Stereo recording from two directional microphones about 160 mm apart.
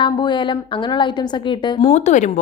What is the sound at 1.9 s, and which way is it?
Speech, 45° left (ahead or behind).